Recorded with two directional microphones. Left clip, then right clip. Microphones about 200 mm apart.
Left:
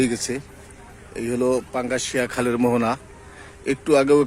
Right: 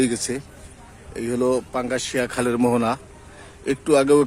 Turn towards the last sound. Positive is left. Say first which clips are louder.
# even
turn(degrees=0)  # may be behind; listen again after turning